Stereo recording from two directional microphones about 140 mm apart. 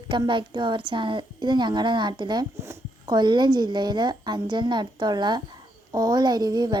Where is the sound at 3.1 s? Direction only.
35° right (ahead or behind).